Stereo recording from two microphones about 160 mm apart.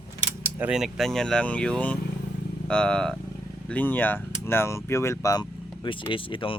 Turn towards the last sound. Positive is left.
turn(degrees=35)  # may be behind; listen again after turning